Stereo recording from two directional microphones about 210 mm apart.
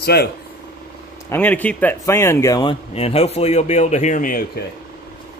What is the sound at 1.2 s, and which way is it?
Speech, 10° left (ahead or behind).